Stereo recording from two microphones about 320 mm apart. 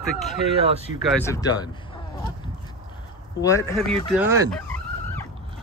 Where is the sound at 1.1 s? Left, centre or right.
Centre.